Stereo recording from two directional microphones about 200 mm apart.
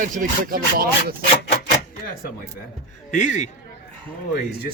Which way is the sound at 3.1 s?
40° left (ahead or behind).